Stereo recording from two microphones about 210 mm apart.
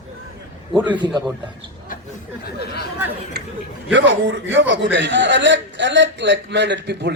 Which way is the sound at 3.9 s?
60° right (ahead or behind).